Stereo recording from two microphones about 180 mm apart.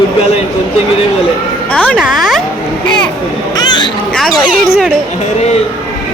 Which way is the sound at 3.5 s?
25° left (ahead or behind).